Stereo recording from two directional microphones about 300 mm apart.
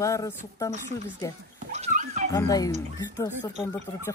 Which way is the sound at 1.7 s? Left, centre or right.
Right.